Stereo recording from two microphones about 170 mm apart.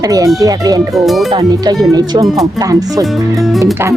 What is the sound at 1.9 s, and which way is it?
Speech, 20° right (ahead or behind).